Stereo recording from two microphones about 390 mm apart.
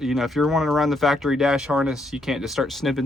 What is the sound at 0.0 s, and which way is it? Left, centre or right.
Speech, centre.